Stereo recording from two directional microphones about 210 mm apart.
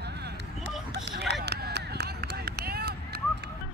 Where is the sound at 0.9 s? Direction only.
55° right (ahead or behind).